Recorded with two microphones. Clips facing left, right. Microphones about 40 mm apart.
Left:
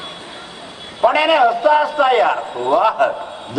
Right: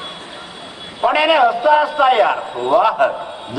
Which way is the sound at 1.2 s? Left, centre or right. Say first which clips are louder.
Right 2 dB; centre.